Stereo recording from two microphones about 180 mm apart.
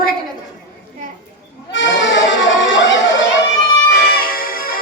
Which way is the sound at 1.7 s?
90° left.